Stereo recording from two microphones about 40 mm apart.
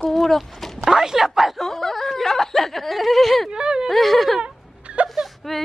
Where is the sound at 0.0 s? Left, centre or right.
Centre.